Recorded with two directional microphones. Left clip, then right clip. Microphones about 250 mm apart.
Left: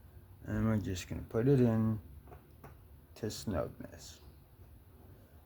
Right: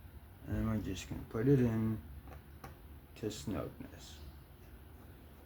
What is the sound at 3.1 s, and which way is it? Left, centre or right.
Speech, left.